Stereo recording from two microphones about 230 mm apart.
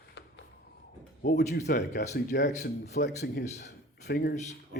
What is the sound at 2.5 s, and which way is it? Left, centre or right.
Speech, left.